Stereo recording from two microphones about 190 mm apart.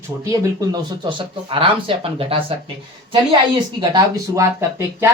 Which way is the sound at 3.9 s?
15° right (ahead or behind).